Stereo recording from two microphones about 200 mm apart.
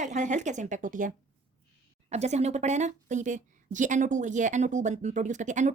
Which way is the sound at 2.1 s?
35° right (ahead or behind).